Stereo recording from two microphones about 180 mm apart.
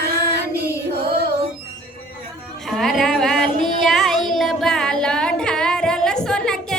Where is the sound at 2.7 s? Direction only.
Centre (ahead or behind).